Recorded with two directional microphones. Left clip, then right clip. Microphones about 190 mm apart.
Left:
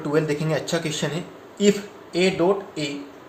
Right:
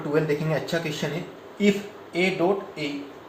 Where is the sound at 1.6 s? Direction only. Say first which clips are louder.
Left 3 dB; 50° left (ahead or behind).